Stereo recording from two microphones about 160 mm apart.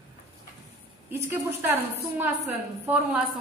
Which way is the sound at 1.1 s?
15° right (ahead or behind).